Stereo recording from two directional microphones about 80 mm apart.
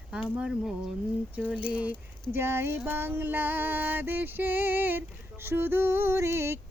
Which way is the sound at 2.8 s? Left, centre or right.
Right.